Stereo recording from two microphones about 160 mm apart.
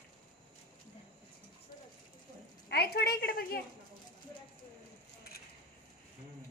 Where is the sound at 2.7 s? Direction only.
80° left; by 3.4 s 65° left (ahead or behind).